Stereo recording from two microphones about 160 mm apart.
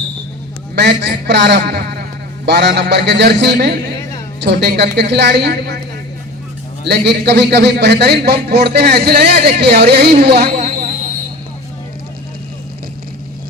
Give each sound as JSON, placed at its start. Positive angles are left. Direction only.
{"t": 0.8, "sound": "a man's voice", "side_deg": -90}
{"t": 2.5, "sound": "a man's voice", "side_deg": -90}
{"t": 6.8, "sound": "a man's voice", "side_deg": -90}
{"t": 9.3, "sound": "a man's voice", "side_deg": -90}
{"t": 10.4, "sound": "a sound", "side_deg": -45}